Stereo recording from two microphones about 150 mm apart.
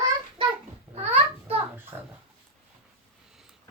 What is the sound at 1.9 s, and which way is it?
Speech, 20° right (ahead or behind).